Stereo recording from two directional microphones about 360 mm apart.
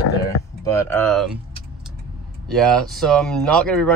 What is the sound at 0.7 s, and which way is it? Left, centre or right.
Speech, centre.